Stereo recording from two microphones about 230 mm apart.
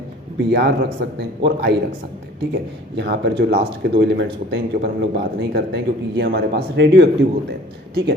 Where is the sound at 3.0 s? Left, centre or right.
Right.